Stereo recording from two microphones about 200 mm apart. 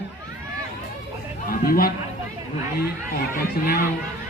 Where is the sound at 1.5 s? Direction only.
45° left (ahead or behind).